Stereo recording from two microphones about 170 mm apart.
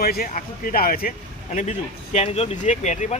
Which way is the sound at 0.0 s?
60° left (ahead or behind).